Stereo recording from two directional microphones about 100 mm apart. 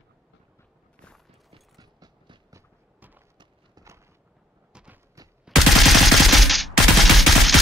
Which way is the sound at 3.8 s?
40° right (ahead or behind).